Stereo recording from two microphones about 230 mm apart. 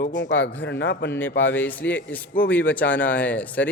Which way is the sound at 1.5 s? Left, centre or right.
Centre.